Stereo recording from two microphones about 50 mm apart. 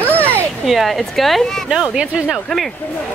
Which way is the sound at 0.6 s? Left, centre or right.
Centre.